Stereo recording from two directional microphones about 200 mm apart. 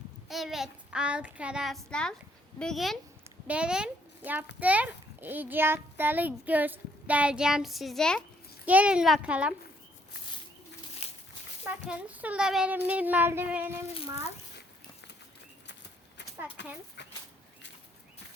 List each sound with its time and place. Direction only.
0.3 s a child's voice: centre (ahead or behind)
3.2 s a sound: 5° right (ahead or behind)
4.6 s a child's voice: 5° right (ahead or behind)
11.0 s dog: 35° left (ahead or behind)
11.6 s a child's voice: 5° right (ahead or behind)